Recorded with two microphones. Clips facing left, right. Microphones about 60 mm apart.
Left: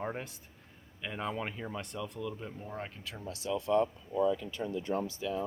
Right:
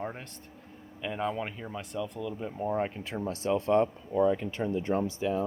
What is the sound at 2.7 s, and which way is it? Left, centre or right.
Speech, right.